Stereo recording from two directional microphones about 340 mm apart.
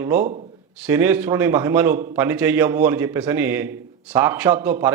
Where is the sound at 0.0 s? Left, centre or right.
Centre.